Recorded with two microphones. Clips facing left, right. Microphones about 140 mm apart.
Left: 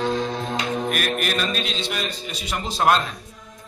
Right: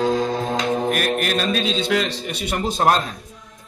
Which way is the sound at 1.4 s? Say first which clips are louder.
Right 5 dB; 80° right.